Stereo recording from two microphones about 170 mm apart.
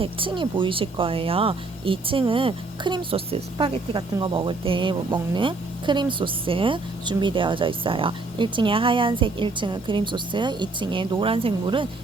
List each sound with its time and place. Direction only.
0.0 s speech: 30° right (ahead or behind)